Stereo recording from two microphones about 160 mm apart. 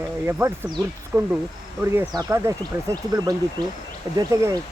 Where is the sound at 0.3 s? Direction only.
15° right (ahead or behind).